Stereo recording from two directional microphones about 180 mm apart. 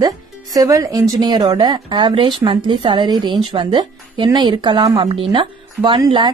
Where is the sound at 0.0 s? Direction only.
20° right (ahead or behind).